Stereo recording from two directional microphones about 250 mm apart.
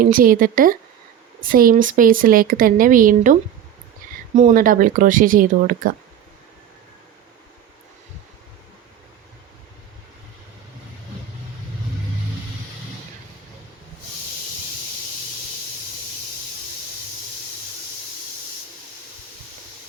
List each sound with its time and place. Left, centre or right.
0.0 s speech: right
4.0 s a sound: right
4.4 s speech: right